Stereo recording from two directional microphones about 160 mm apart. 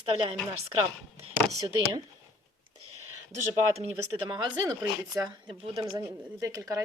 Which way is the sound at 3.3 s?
40° right (ahead or behind).